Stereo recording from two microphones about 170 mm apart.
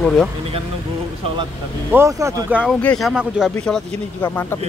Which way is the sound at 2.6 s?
10° left (ahead or behind).